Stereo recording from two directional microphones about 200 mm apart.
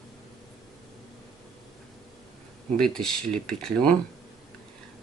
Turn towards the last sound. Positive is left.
turn(degrees=5)  # may be behind; listen again after turning